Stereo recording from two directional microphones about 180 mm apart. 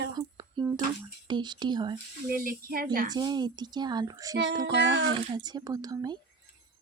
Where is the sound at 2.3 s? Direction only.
55° right (ahead or behind).